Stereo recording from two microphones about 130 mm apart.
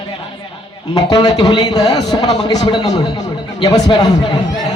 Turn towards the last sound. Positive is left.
turn(degrees=30)  # may be behind; listen again after turning